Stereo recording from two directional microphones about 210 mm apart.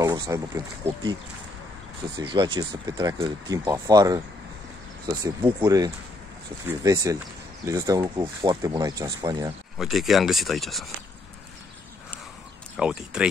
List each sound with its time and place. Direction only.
0.0 s a sound: 15° right (ahead or behind)
2.1 s speech: 25° right (ahead or behind)
9.8 s speech: centre (ahead or behind)
12.7 s speech: 5° right (ahead or behind)